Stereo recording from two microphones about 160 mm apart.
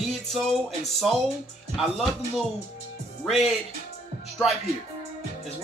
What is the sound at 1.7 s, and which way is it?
Speech, centre (ahead or behind).